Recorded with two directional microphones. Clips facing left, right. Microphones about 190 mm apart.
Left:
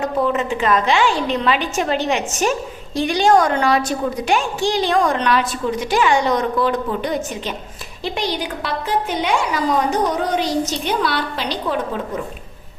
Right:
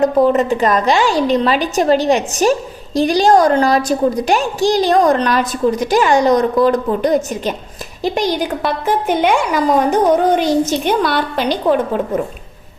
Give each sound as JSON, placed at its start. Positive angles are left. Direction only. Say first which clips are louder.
{"t": 0.0, "sound": "a woman's voice", "louder": "right 7 dB", "side_deg": -40}